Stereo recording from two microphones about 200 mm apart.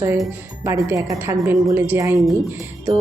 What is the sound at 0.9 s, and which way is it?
A woman's voice, 15° right (ahead or behind).